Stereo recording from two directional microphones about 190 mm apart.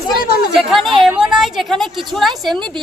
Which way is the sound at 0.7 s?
Centre (ahead or behind).